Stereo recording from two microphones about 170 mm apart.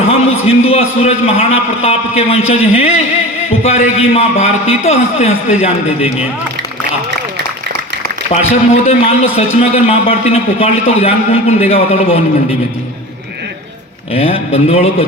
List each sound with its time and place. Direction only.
0.1 s a man's voice: 35° left (ahead or behind)
8.3 s a man's voice: 40° left (ahead or behind)
14.1 s a man's voice: 35° left (ahead or behind)